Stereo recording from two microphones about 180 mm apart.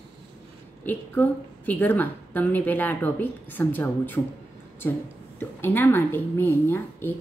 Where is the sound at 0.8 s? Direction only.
10° left (ahead or behind).